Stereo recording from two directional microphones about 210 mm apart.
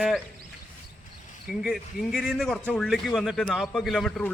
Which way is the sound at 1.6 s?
Centre (ahead or behind).